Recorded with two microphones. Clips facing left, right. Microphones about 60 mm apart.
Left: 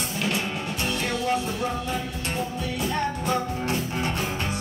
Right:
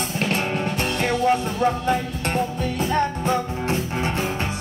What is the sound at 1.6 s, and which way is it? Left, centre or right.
Music, right.